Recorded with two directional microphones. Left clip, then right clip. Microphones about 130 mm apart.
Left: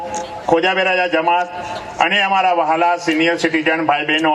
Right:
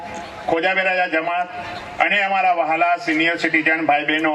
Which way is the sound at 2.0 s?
35° left (ahead or behind).